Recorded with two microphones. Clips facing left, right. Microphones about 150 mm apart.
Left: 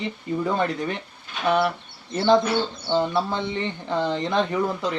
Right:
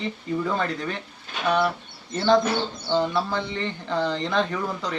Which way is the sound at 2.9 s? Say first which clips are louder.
Even; 20° left (ahead or behind).